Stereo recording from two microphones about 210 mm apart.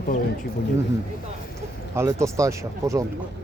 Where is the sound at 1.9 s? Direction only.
15° right (ahead or behind).